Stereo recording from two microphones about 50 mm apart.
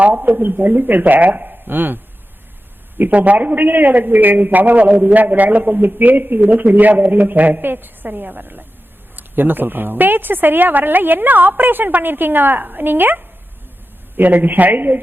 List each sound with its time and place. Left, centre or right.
0.0 s a man's voice: right
3.0 s a man's voice: right